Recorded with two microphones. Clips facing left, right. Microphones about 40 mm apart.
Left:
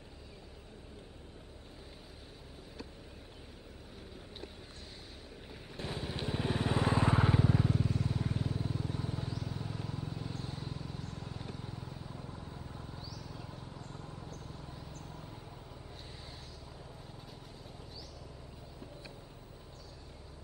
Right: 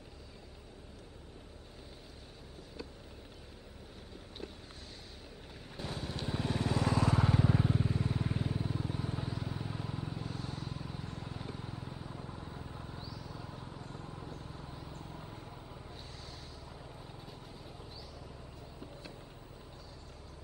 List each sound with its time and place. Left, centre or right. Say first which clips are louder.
5.5 s vehicle: left 1 dB; centre
7.3 s vehicle: even; centre
10.4 s vehicle: right 1 dB; centre
10.8 s vehicle: right 1 dB; centre
13.3 s a sound: right 1 dB; centre
13.6 s vehicle: right 1 dB; centre
14.3 s horse: right 1 dB; centre
14.9 s a sound: right 1 dB; centre